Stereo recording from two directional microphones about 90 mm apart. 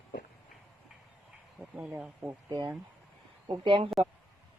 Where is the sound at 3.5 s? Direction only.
70° right (ahead or behind).